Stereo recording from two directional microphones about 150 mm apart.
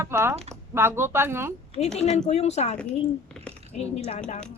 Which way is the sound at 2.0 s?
45° left (ahead or behind).